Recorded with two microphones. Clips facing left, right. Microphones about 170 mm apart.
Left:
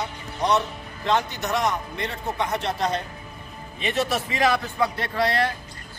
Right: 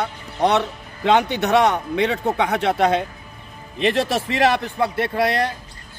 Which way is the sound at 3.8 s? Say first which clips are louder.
Right 5 dB; 90° right.